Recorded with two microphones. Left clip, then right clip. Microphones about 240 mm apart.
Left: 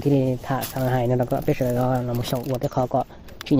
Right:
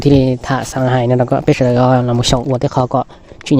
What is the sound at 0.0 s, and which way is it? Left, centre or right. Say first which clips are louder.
Speech: right 9 dB; right.